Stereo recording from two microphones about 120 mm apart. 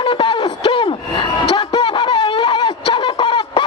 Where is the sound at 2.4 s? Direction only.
45° left (ahead or behind).